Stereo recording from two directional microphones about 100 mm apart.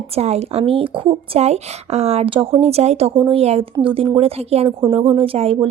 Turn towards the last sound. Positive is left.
turn(degrees=-75)  # may be behind; listen again after turning